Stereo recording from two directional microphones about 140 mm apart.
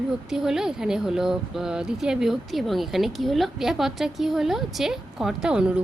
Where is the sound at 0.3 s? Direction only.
5° right (ahead or behind).